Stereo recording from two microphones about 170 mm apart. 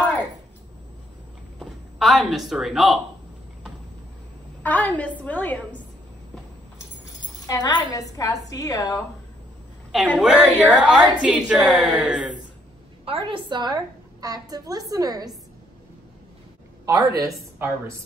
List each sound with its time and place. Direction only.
1.6 s speech: centre (ahead or behind)
4.6 s a woman's voice: 10° left (ahead or behind)
7.4 s a woman's voice: 20° left (ahead or behind)
9.9 s a woman's voice: 5° left (ahead or behind)
10.2 s a woman's voice: 5° right (ahead or behind)
13.0 s a woman's voice: 30° right (ahead or behind)
17.2 s a woman's voice: 15° right (ahead or behind)